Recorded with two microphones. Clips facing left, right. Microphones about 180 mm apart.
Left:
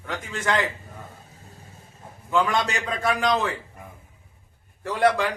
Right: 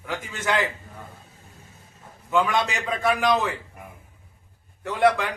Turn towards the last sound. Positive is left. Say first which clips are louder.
# even
turn(degrees=0)  # may be behind; listen again after turning